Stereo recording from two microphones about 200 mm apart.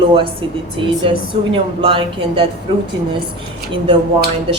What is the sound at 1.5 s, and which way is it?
Speech, 25° right (ahead or behind).